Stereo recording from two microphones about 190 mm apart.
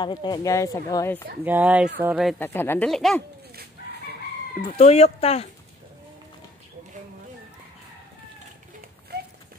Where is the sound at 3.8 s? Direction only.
50° left (ahead or behind).